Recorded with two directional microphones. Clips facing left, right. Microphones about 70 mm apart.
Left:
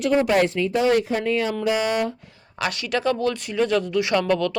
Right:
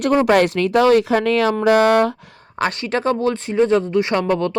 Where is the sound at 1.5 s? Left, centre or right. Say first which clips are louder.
Right 8 dB; right.